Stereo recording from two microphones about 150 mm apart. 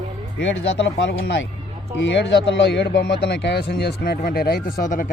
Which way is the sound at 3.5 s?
90° left.